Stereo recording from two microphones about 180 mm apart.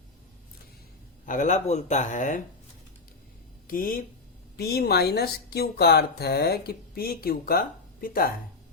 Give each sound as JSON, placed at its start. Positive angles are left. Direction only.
{"t": 1.2, "sound": "speech", "side_deg": 45}
{"t": 3.7, "sound": "speech", "side_deg": 50}
{"t": 4.5, "sound": "speech", "side_deg": 60}